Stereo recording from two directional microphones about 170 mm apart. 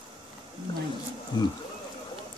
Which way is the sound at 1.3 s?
25° left (ahead or behind).